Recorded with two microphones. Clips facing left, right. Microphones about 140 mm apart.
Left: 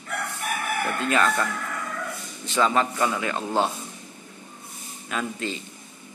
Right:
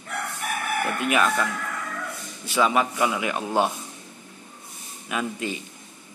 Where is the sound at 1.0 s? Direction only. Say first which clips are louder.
Even; 15° right (ahead or behind).